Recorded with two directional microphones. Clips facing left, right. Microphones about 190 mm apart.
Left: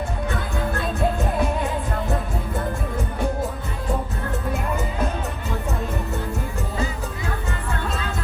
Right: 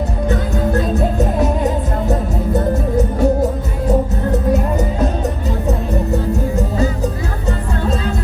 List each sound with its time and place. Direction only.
0.3 s music: 40° right (ahead or behind)
4.5 s music: 40° right (ahead or behind)